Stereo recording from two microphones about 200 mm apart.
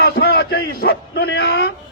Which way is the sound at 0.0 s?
50° left (ahead or behind).